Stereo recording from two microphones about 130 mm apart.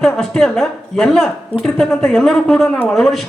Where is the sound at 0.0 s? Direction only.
5° left (ahead or behind).